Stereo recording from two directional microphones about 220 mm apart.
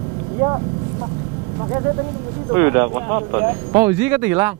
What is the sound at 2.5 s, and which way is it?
Speech, 15° right (ahead or behind).